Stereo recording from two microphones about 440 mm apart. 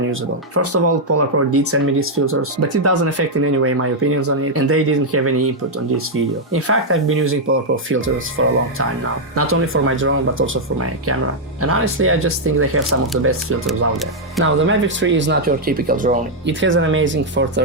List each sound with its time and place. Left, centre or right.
0.1 s speech: right
13.7 s speech: centre
14.4 s speech: right